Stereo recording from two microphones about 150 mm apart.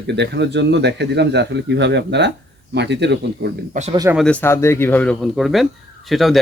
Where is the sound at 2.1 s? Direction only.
90° right.